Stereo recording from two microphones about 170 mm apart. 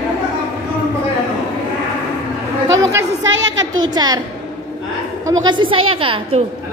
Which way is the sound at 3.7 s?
25° right (ahead or behind).